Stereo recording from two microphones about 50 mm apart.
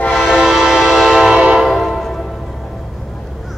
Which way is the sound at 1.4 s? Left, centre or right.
Centre.